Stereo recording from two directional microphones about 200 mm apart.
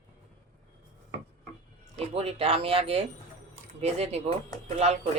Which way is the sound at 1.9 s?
30° right (ahead or behind).